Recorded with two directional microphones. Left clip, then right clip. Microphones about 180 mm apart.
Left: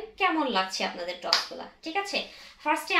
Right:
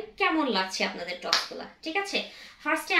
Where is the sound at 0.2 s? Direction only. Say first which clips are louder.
Even; 20° right (ahead or behind).